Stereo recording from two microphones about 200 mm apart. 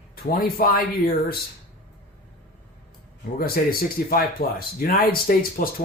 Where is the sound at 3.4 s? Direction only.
45° left (ahead or behind).